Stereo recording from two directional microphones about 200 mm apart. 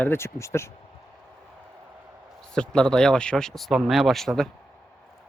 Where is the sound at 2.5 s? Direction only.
5° left (ahead or behind).